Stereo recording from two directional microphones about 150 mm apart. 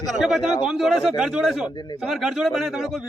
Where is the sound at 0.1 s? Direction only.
Centre (ahead or behind).